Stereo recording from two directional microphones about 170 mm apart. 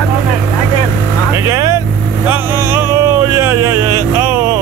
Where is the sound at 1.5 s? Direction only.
20° right (ahead or behind).